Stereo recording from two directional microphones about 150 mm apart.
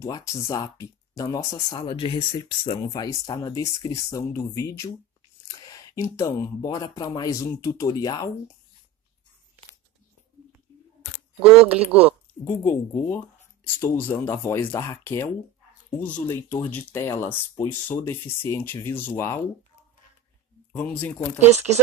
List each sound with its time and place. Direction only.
0.0 s speech: 20° left (ahead or behind)
5.5 s a sound: 25° left (ahead or behind)
6.4 s speech: 25° left (ahead or behind)
11.3 s speech: 10° right (ahead or behind)
12.4 s speech: 15° left (ahead or behind)
20.7 s speech: 10° left (ahead or behind)
21.5 s speech: 50° right (ahead or behind)